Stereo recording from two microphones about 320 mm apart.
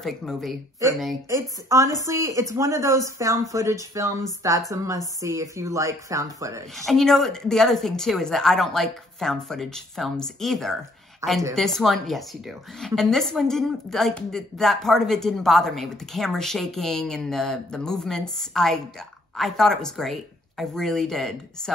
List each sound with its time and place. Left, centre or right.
0.0 s a woman's voice: centre
6.9 s a woman's voice: centre